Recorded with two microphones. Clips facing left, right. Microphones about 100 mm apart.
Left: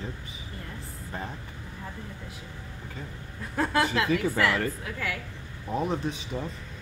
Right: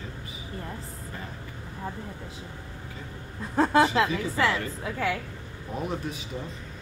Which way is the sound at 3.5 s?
30° right (ahead or behind).